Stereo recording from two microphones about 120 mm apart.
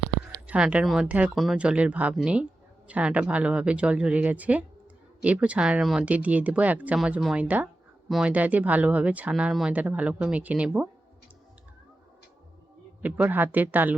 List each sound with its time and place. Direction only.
0.4 s speech: 10° right (ahead or behind)
13.0 s speech: 10° right (ahead or behind)